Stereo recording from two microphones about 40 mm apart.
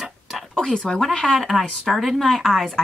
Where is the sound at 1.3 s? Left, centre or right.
Centre.